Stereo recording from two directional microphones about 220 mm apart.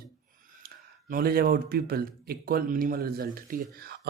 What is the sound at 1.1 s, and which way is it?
A man's voice, 45° right (ahead or behind).